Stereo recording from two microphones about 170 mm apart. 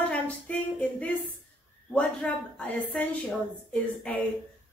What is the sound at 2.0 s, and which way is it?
A woman's voice, 5° left (ahead or behind).